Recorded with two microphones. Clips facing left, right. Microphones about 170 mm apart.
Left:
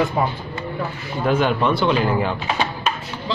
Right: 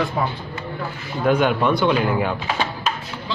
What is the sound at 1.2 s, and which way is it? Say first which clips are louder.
Speech: right 1 dB; centre (ahead or behind).